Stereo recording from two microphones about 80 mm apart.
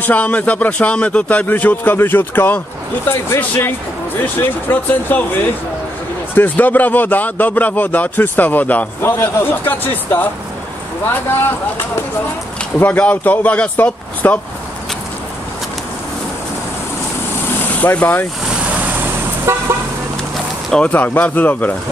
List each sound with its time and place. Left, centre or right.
0.0 s speech: centre
6.3 s speech: left
12.7 s speech: left
17.7 s speech: centre
19.5 s car: right
20.7 s speech: centre